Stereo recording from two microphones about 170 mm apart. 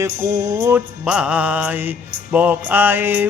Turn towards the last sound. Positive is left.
turn(degrees=-10)  # may be behind; listen again after turning